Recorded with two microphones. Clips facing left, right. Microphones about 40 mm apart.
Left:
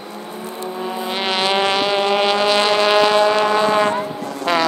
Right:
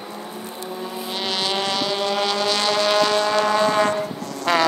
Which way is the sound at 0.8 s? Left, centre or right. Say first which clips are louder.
Left 6 dB; left.